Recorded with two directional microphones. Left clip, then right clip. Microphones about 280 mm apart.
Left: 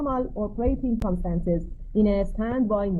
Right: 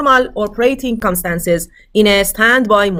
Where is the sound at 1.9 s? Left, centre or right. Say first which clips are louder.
Right 13 dB; right.